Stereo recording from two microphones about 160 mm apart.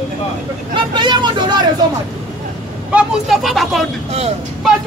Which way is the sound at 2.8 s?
5° right (ahead or behind).